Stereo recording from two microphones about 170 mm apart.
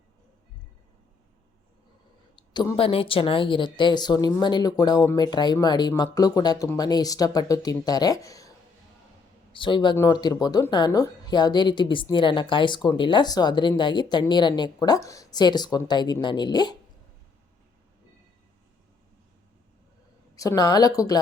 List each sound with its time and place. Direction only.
2.3 s speech: 25° left (ahead or behind)
20.3 s speech: 20° left (ahead or behind)